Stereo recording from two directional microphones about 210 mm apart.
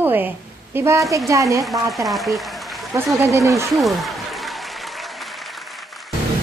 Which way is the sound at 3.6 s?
Centre (ahead or behind).